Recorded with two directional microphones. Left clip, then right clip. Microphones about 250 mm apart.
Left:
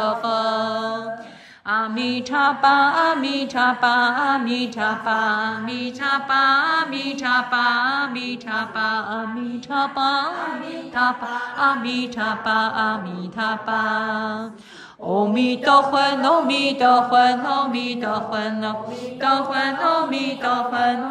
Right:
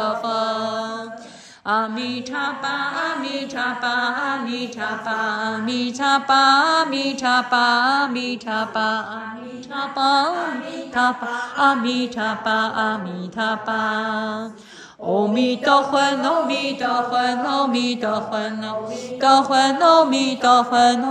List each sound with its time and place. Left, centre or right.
0.0 s mantra: centre
2.0 s mantra: centre